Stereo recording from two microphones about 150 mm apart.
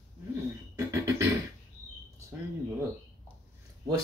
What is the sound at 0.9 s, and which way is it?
Beatboxing, 20° right (ahead or behind).